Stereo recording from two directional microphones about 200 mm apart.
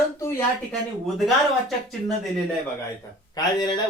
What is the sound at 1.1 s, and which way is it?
Speech, centre (ahead or behind).